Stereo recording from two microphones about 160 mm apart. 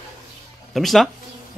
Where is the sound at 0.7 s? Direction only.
Centre (ahead or behind).